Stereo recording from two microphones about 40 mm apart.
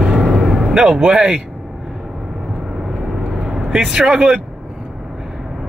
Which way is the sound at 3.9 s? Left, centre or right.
Right.